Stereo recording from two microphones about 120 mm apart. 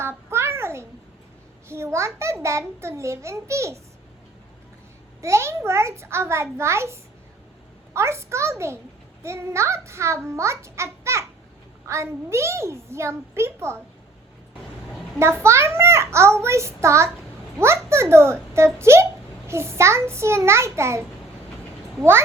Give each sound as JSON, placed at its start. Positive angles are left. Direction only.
{"t": 0.0, "sound": "a sound", "side_deg": -20}
{"t": 1.6, "sound": "a child's voice", "side_deg": -20}
{"t": 5.2, "sound": "a child's voice", "side_deg": -25}
{"t": 15.2, "sound": "a child's voice", "side_deg": -20}